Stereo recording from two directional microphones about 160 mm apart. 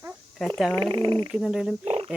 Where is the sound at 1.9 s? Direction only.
35° right (ahead or behind).